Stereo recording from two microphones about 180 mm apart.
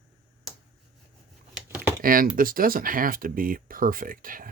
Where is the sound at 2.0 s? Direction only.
50° right (ahead or behind).